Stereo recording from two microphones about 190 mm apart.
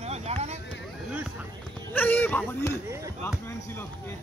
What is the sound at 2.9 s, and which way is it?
Chop, 15° right (ahead or behind).